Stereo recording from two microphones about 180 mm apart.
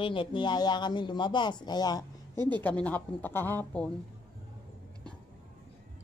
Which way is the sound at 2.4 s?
25° right (ahead or behind).